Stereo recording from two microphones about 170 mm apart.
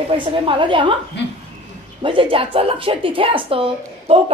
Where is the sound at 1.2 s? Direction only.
90° left.